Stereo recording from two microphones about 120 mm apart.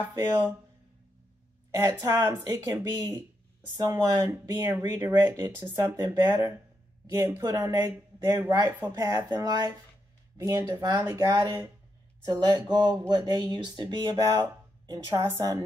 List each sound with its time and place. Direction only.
1.8 s speech: 30° right (ahead or behind)
8.9 s speech: 30° right (ahead or behind)